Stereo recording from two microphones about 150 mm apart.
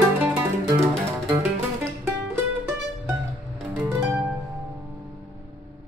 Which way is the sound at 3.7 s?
15° right (ahead or behind).